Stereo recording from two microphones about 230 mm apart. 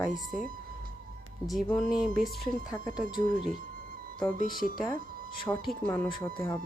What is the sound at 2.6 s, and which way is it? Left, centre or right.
Speech, centre.